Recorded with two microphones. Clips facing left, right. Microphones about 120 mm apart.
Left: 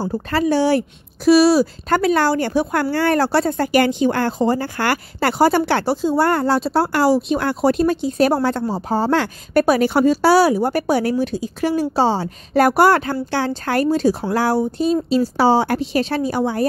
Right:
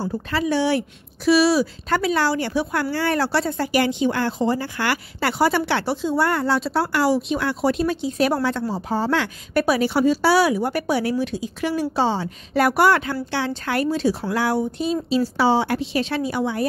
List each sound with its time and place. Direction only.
0.0 s speech: 40° left (ahead or behind)